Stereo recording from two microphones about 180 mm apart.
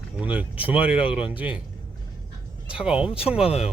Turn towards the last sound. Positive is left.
turn(degrees=35)  # may be behind; listen again after turning